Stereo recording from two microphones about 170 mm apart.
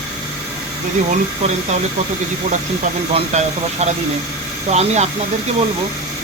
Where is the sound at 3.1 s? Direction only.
40° right (ahead or behind).